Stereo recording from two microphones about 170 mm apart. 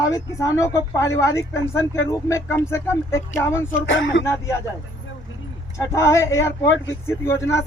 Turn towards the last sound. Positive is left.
turn(degrees=15)  # may be behind; listen again after turning